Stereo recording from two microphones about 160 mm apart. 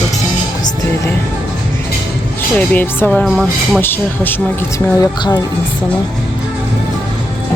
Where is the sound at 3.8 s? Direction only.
15° left (ahead or behind).